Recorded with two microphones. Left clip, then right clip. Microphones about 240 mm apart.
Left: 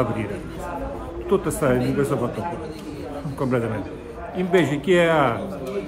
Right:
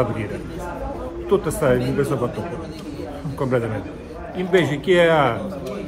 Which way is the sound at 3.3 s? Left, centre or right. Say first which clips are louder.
Right 2 dB; centre.